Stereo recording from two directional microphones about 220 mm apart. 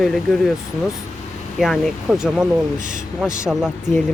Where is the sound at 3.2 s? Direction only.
Centre (ahead or behind).